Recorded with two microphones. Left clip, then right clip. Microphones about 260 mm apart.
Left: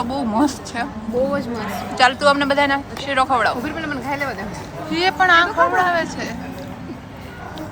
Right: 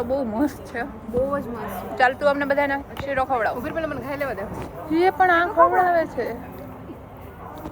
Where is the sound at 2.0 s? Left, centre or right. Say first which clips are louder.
Left 4 dB; centre.